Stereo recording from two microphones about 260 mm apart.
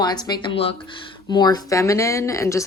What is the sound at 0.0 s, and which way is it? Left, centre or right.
Speech, centre.